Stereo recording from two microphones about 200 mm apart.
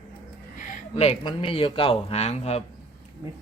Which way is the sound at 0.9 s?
25° left (ahead or behind).